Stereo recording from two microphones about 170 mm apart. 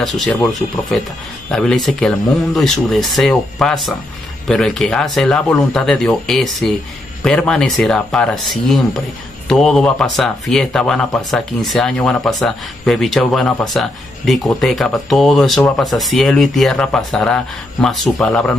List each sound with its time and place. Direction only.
0.0 s speech: centre (ahead or behind)
1.5 s speech: 5° left (ahead or behind)